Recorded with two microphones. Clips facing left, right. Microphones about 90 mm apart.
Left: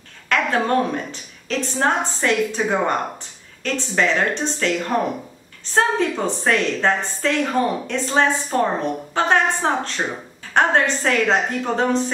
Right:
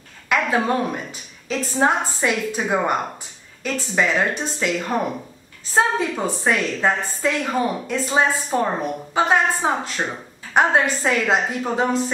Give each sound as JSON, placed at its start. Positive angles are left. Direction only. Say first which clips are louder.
{"t": 0.3, "sound": "a woman's voice", "louder": "left 1 dB", "side_deg": -10}